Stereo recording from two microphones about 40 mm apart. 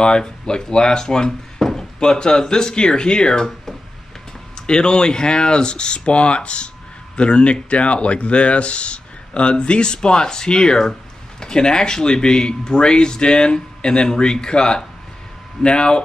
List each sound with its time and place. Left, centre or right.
0.0 s speech: left
4.6 s speech: left